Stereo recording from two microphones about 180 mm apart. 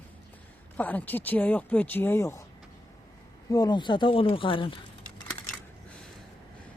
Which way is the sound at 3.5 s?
20° left (ahead or behind).